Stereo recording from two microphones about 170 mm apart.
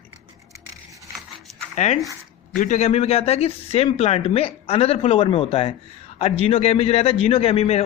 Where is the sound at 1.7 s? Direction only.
45° left (ahead or behind).